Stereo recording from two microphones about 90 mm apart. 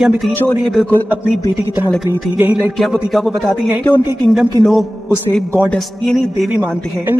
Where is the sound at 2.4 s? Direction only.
20° right (ahead or behind).